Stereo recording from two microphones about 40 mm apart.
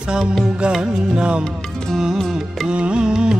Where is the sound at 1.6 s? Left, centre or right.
Centre.